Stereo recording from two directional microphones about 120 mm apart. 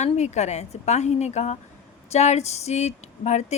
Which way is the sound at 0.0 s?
70° left (ahead or behind).